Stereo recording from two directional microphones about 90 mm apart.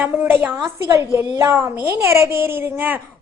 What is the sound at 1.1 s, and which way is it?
A woman's voice, 30° right (ahead or behind).